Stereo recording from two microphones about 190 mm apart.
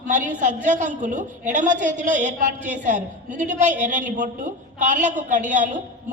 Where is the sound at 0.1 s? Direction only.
40° right (ahead or behind).